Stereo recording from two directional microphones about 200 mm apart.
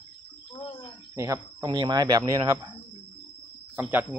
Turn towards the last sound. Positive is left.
turn(degrees=-10)  # may be behind; listen again after turning